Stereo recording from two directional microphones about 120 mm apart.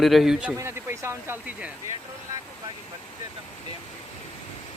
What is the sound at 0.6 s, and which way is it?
Speech, 20° right (ahead or behind).